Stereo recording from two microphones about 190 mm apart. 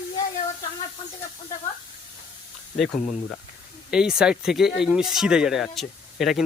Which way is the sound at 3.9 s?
5° right (ahead or behind).